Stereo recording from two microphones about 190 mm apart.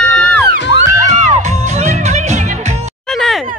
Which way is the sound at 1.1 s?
40° right (ahead or behind).